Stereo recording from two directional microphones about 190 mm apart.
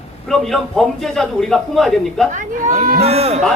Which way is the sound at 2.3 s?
40° right (ahead or behind).